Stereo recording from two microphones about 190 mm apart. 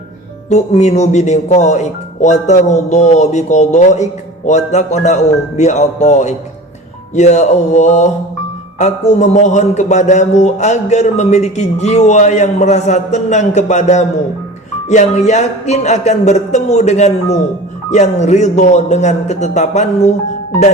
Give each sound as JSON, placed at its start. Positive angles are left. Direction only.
{"t": 0.5, "sound": "speech", "side_deg": 35}
{"t": 15.3, "sound": "speech", "side_deg": 35}